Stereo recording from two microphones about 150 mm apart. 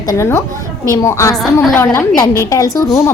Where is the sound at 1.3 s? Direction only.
Centre (ahead or behind).